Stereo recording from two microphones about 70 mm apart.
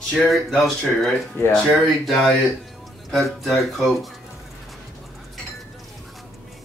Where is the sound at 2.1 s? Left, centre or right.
Centre.